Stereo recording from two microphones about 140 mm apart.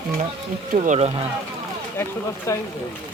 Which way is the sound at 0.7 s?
60° right (ahead or behind).